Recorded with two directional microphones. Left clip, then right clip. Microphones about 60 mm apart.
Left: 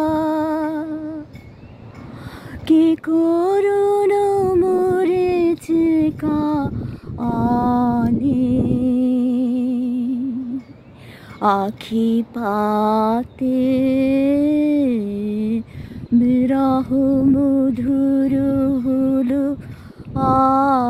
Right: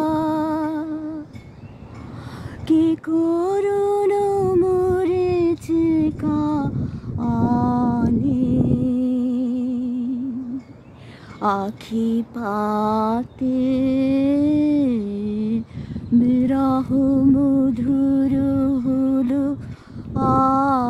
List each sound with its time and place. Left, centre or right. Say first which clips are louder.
0.0 s music: left 2 dB; centre
2.6 s a sound: left 3 dB; left
5.1 s female singing: left 2 dB; left
7.2 s mantra: left 2 dB; left
8.2 s music: left 2 dB; left
11.3 s female singing: left 4 dB; left
12.6 s music: left 3 dB; centre
20.2 s lullaby: left 2 dB; centre